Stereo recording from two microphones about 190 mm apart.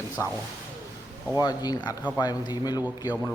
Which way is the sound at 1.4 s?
20° left (ahead or behind).